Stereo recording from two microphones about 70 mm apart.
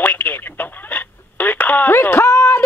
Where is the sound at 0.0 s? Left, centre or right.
Left.